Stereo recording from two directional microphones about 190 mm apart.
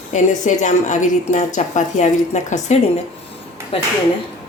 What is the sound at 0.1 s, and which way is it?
Speech, 40° left (ahead or behind).